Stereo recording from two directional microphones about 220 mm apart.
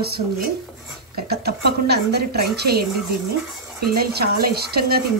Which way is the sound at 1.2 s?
45° right (ahead or behind).